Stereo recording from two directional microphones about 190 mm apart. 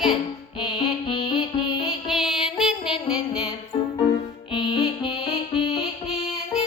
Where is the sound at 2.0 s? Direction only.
Centre (ahead or behind).